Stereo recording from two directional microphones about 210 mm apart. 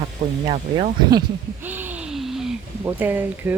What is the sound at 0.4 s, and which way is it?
Speech, 20° right (ahead or behind).